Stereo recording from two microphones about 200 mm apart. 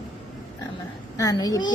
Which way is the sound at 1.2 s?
15° left (ahead or behind).